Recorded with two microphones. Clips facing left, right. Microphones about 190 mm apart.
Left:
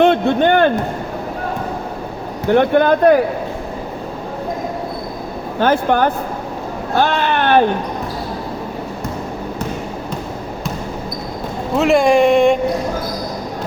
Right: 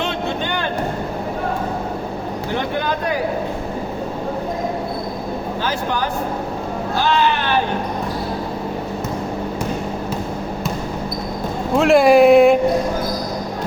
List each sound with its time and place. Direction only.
0.0 s a sound: 55° left (ahead or behind)
2.5 s a man's voice: 55° left (ahead or behind)
5.5 s a man's voice: 55° left (ahead or behind)
6.9 s vehicle: 55° left (ahead or behind)
11.8 s speech: centre (ahead or behind)